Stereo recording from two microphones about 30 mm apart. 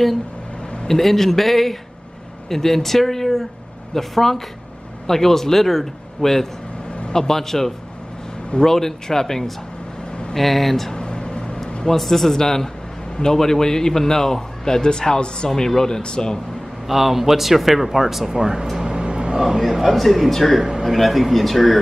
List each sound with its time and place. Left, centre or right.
0.8 s a man's voice: centre
11.0 s a sound: left
12.0 s a man's voice: centre; by 16.3 s left
16.8 s a man's voice: centre
18.3 s speech: right
18.8 s vehicle: right
19.3 s a man's voice: centre
19.6 s speech: centre